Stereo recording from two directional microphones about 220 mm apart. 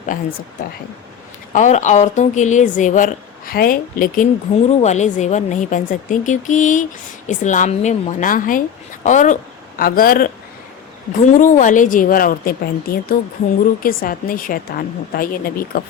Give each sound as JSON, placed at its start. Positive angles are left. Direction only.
{"t": 1.5, "sound": "a woman's voice", "side_deg": 35}